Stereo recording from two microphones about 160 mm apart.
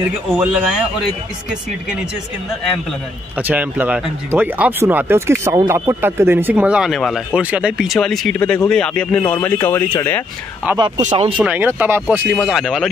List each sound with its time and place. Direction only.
0.4 s speech: 5° right (ahead or behind)
3.3 s speech: 10° right (ahead or behind); by 10.2 s 15° left (ahead or behind)
10.6 s speech: 5° right (ahead or behind)
11.0 s speech: 50° right (ahead or behind)
11.3 s speech: 10° right (ahead or behind)